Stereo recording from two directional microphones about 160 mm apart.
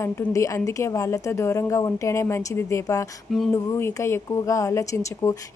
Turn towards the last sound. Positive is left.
turn(degrees=20)  # may be behind; listen again after turning